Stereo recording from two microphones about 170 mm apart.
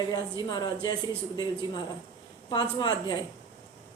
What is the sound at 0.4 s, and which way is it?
Speech, 25° left (ahead or behind).